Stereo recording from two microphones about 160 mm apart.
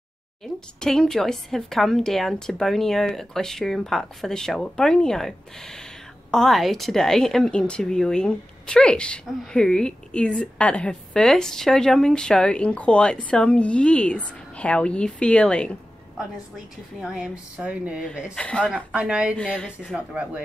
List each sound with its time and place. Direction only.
0.4 s a woman's voice: 5° left (ahead or behind)
17.0 s speech: 5° right (ahead or behind)
18.3 s speech: 5° left (ahead or behind)
18.9 s speech: 5° right (ahead or behind)
19.3 s a woman's voice: 5° left (ahead or behind)
19.8 s speech: 5° right (ahead or behind)